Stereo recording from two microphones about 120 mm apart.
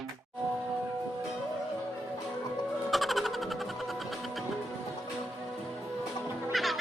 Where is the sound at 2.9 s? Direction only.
Centre (ahead or behind).